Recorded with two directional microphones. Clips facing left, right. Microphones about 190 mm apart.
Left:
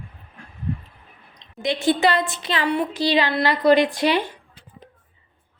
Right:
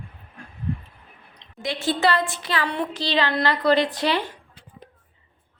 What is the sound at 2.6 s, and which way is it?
A woman's voice, 10° left (ahead or behind).